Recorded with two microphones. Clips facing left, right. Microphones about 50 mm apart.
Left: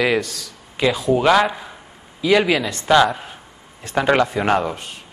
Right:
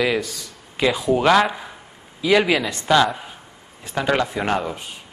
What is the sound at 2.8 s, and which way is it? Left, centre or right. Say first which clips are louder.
Speech: left 4 dB; centre.